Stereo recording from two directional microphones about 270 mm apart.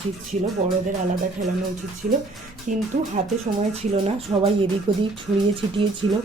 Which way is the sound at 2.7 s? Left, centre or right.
Right.